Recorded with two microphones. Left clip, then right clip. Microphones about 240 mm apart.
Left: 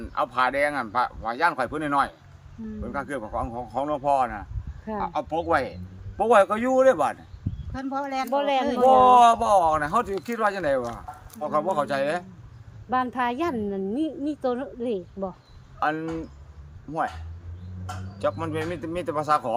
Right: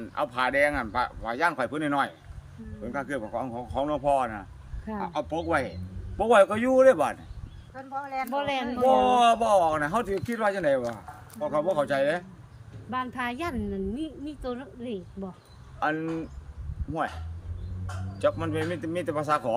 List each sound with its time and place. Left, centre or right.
0.0 s speech: centre
8.0 s speech: left
8.3 s a woman's voice: centre
10.8 s a sound: centre
11.4 s speech: centre
12.9 s a woman's voice: centre
15.8 s speech: centre
18.2 s speech: centre